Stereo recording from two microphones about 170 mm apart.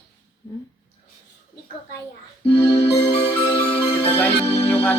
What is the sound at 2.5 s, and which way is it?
Music, 30° left (ahead or behind).